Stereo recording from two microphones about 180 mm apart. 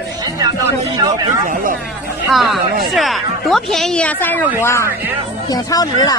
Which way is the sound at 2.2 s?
Centre (ahead or behind).